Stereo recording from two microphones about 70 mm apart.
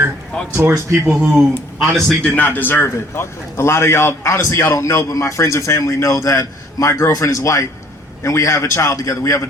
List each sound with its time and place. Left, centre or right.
0.3 s speech: centre
1.0 s speech: centre
1.8 s a man's voice: centre
2.2 s a man's voice: left